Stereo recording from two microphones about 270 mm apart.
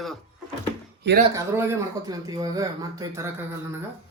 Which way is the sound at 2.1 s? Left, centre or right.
Centre.